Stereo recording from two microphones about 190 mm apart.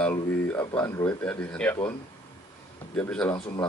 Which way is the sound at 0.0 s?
10° left (ahead or behind).